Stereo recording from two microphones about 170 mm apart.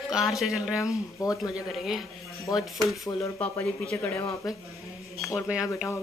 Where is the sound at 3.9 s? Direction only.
15° left (ahead or behind).